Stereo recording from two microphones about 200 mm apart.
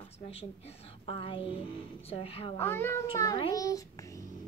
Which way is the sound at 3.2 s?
20° left (ahead or behind).